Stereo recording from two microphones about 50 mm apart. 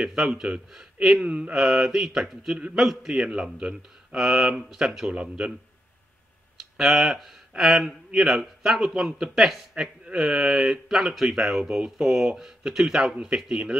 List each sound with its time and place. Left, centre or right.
0.0 s a man's voice: centre
1.2 s mantra: right
1.5 s a man's voice: centre
6.8 s a man's voice: centre
12.0 s a man's voice: centre